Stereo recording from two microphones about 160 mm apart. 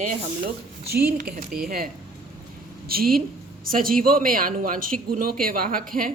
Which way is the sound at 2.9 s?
65° right (ahead or behind).